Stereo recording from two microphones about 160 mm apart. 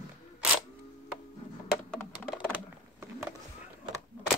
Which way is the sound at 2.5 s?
15° right (ahead or behind).